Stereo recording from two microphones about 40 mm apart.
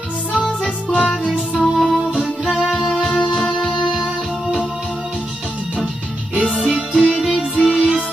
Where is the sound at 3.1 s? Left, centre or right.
Left.